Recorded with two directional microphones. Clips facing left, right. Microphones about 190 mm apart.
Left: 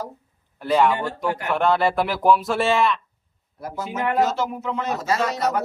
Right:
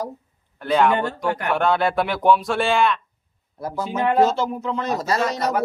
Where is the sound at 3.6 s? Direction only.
30° right (ahead or behind).